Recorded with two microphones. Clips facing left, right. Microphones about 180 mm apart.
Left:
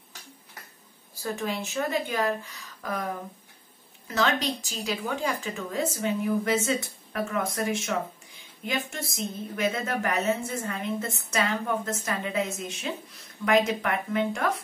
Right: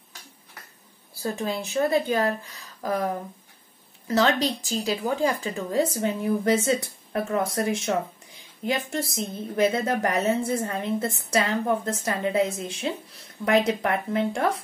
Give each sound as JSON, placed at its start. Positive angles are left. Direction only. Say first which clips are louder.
{"t": 1.2, "sound": "a woman's voice", "louder": "right 2 dB", "side_deg": -35}
{"t": 4.1, "sound": "a woman's voice", "louder": "right 4 dB", "side_deg": -35}